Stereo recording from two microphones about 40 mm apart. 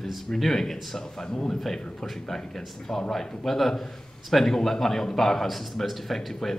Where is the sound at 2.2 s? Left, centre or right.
Left.